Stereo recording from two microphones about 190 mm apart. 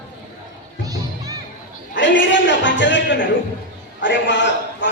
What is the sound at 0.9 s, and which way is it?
Music, 20° right (ahead or behind).